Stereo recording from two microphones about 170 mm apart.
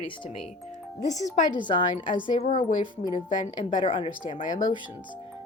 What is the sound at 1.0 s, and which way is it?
Speech, 45° left (ahead or behind).